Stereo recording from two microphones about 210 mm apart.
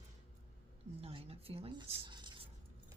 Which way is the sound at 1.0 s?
30° right (ahead or behind).